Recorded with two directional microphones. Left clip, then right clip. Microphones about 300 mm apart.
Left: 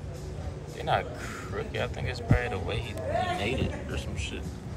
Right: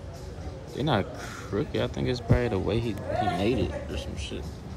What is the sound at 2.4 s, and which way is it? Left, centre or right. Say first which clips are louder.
Speech: right 5 dB; centre.